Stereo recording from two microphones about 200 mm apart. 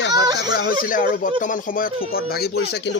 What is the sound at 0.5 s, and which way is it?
Speech, 45° left (ahead or behind).